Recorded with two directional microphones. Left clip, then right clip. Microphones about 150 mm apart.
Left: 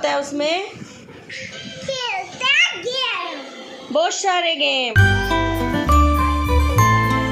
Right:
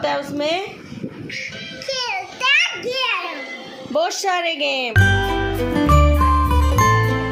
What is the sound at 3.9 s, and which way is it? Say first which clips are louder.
Speech: left 1 dB; centre (ahead or behind).